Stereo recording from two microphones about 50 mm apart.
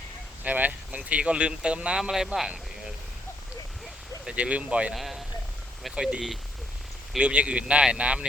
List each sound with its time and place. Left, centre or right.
0.4 s speech: right
2.0 s a man's voice: centre
4.3 s speech: right
4.9 s a man's voice: centre
5.9 s a man's voice: centre